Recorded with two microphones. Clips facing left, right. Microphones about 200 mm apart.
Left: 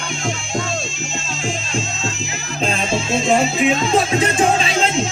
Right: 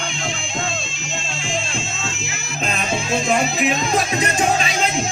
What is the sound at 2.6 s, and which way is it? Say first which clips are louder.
Music: left 3 dB; 30° left (ahead or behind).